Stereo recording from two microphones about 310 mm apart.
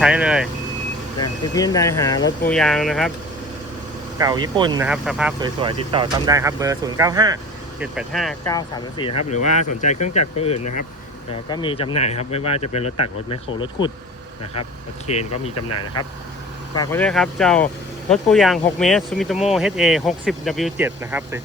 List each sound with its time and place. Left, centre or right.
0.0 s speech: centre
1.2 s speech: centre
4.2 s speech: centre
4.9 s speech: centre
5.4 s speech: centre
7.8 s speech: centre
8.4 s speech: centre
15.0 s speech: left
15.5 s speech: left
16.7 s speech: centre